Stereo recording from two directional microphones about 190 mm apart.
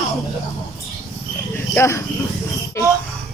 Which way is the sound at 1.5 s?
15° left (ahead or behind).